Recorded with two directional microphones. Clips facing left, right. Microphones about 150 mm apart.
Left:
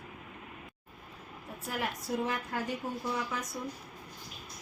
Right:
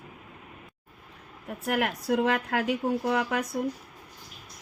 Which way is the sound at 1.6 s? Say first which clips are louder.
Right 9 dB; 70° right (ahead or behind).